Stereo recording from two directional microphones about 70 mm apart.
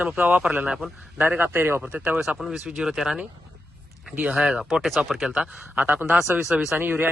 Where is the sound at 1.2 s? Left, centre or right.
Right.